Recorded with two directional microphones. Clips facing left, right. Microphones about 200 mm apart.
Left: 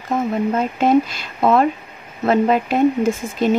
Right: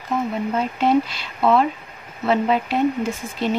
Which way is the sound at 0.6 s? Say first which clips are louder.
Left 2 dB; 45° left (ahead or behind).